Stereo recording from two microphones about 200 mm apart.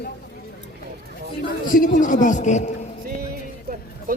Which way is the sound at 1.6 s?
40° left (ahead or behind).